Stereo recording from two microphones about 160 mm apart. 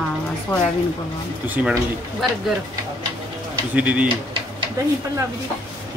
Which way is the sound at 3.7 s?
10° right (ahead or behind).